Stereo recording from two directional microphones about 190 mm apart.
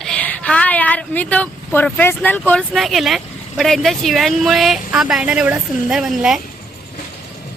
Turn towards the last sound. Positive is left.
turn(degrees=0)  # may be behind; listen again after turning